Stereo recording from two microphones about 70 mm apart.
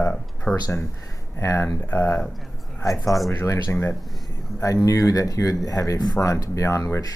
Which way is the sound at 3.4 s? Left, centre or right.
Left.